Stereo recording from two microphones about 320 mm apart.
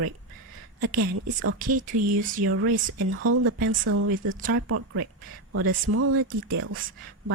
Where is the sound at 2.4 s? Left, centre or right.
Right.